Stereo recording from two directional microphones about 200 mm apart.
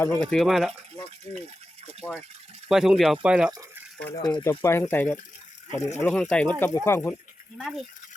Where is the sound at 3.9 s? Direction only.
10° left (ahead or behind).